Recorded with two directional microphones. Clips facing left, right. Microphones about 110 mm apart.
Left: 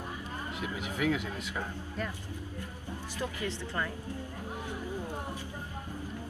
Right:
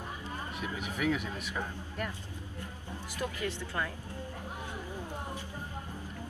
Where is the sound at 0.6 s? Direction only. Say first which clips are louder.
Left 2 dB; 15° left (ahead or behind).